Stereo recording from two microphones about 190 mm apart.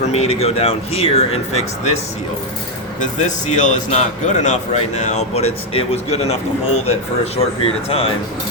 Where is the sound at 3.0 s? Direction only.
40° left (ahead or behind).